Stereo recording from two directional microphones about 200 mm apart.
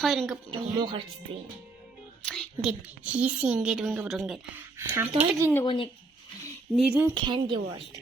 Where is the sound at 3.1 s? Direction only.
5° right (ahead or behind).